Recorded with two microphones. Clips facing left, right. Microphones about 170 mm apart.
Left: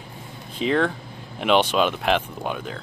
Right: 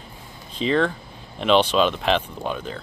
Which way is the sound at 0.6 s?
10° left (ahead or behind).